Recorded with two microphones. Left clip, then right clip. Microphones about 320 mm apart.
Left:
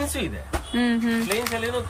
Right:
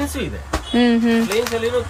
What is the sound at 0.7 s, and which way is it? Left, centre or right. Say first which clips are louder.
Speech: right 8 dB; centre.